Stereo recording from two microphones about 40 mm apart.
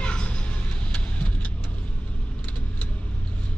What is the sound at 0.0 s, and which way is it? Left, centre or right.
Vehicle, left.